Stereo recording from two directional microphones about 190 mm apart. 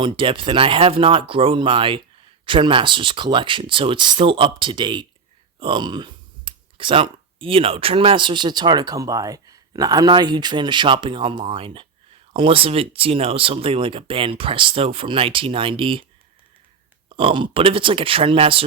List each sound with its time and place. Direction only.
0.0 s speech: 25° right (ahead or behind)
17.1 s speech: 25° right (ahead or behind)